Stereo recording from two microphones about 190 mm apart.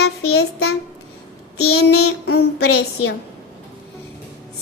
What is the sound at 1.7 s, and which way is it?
Child singing, 75° left (ahead or behind).